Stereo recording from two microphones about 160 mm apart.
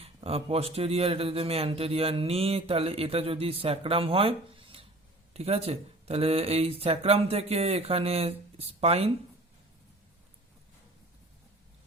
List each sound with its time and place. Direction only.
0.0 s speech: 40° right (ahead or behind)